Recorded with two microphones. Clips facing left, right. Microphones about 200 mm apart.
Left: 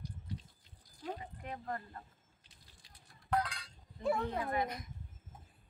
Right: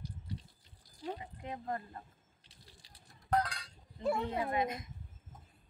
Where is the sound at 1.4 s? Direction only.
20° right (ahead or behind).